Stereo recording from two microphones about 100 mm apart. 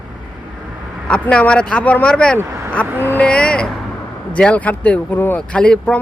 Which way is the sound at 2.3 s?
25° right (ahead or behind).